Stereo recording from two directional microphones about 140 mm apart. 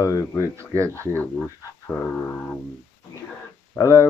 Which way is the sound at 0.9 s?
15° left (ahead or behind).